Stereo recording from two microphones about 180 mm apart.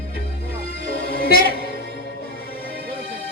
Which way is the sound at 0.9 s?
55° left (ahead or behind).